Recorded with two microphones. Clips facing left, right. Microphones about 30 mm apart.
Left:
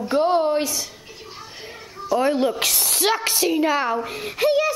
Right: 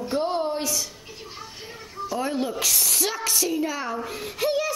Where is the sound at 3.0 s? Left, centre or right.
Left.